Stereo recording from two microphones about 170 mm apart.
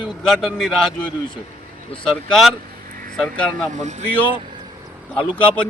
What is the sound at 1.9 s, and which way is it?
Speech, 5° left (ahead or behind).